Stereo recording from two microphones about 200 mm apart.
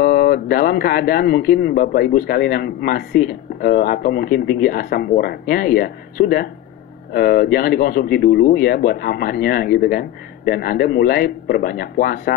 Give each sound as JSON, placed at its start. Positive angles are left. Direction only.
{"t": 0.0, "sound": "speech", "side_deg": 45}